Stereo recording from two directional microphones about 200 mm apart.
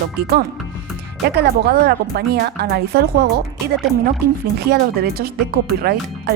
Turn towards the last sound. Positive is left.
turn(degrees=-50)  # may be behind; listen again after turning